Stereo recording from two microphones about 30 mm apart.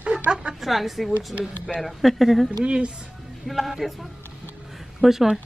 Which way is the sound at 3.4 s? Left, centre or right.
Centre.